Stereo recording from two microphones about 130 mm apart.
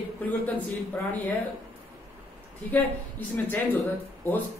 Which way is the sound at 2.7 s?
15° left (ahead or behind).